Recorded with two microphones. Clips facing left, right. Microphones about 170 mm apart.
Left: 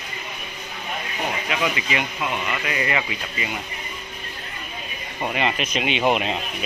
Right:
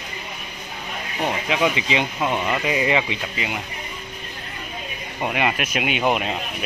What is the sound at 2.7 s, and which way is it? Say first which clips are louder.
Speech: right 4 dB; 15° right (ahead or behind).